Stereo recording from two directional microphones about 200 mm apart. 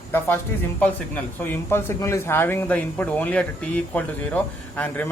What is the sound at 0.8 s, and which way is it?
Speech, 10° left (ahead or behind).